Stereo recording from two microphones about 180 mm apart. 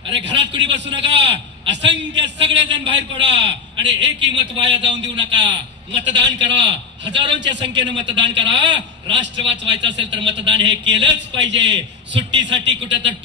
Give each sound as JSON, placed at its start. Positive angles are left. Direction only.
{"t": 0.1, "sound": "a man's voice", "side_deg": -85}
{"t": 1.2, "sound": "a sound", "side_deg": -85}
{"t": 1.9, "sound": "a man's voice", "side_deg": -80}
{"t": 7.9, "sound": "a man's voice", "side_deg": -25}
{"t": 8.2, "sound": "a man's voice", "side_deg": -80}